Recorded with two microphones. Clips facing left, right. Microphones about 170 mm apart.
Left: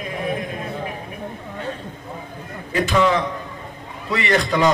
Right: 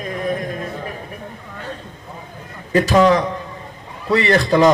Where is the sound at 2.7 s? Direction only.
40° right (ahead or behind).